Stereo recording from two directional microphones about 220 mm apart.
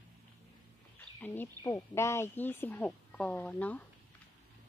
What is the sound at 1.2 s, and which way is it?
Speech, 10° left (ahead or behind).